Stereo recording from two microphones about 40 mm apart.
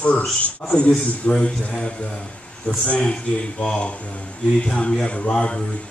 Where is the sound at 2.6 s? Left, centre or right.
Left.